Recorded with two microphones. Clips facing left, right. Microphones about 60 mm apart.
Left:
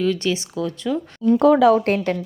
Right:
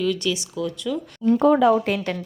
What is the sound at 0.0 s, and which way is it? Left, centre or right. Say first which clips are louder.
Speech: left 2 dB; left.